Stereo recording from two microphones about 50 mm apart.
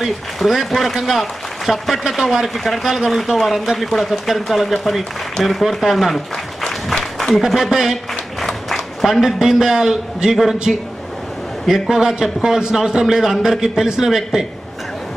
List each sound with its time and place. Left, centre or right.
0.0 s speech: centre
6.6 s a sound: centre
8.1 s applause: centre
9.2 s a man's voice: centre
10.7 s a man's voice: centre